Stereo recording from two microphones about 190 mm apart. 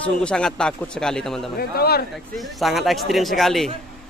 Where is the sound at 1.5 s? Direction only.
55° left (ahead or behind).